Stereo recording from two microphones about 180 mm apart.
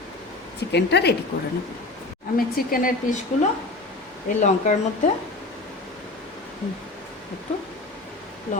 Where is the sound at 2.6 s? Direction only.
50° left (ahead or behind).